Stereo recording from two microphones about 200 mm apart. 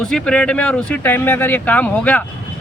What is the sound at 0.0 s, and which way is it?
Speech, 5° left (ahead or behind).